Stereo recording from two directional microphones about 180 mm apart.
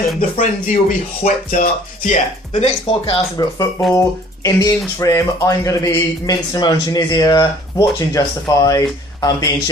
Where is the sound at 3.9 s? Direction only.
20° left (ahead or behind).